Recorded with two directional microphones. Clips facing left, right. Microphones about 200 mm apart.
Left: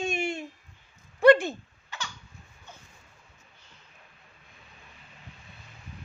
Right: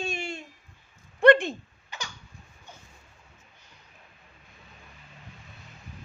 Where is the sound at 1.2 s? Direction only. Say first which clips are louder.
Even; 5° left (ahead or behind).